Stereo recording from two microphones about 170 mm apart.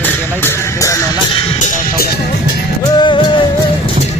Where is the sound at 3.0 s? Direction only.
25° left (ahead or behind).